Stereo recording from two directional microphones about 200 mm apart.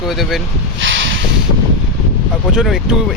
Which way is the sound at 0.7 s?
70° right (ahead or behind).